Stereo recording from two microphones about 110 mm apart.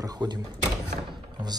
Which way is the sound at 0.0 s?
40° right (ahead or behind).